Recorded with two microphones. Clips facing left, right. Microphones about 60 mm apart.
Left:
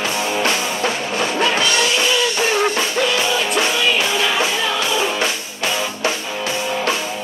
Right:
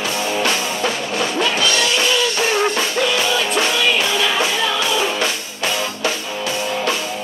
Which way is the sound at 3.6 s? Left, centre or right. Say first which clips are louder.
Even; centre.